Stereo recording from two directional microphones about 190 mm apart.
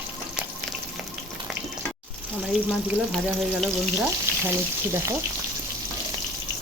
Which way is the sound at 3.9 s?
15° right (ahead or behind).